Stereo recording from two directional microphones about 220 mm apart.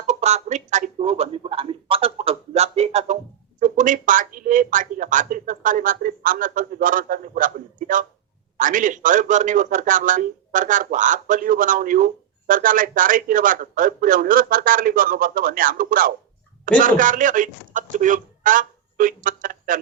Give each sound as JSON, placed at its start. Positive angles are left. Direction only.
{"t": 0.1, "sound": "a man's voice", "side_deg": -30}